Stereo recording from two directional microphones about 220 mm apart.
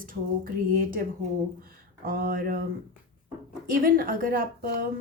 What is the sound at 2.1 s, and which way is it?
Speech, 40° right (ahead or behind).